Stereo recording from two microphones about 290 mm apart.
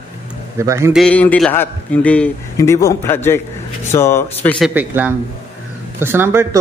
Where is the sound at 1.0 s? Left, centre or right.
Centre.